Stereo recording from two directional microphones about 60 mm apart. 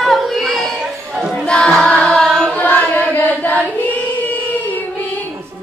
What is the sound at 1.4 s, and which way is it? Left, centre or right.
Choir, centre.